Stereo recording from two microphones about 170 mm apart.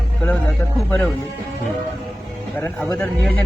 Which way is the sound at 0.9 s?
5° left (ahead or behind).